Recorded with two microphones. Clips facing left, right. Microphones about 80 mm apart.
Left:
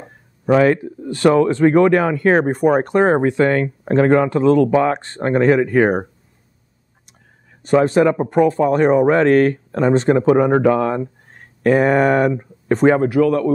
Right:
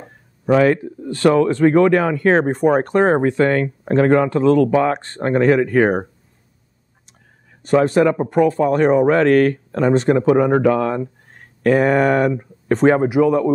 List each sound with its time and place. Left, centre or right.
0.0 s speech: centre
7.6 s speech: left
13.0 s speech: centre